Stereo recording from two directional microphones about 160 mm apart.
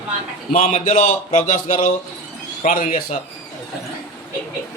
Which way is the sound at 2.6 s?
55° left (ahead or behind).